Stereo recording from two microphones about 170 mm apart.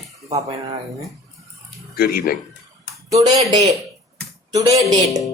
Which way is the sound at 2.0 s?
60° left (ahead or behind).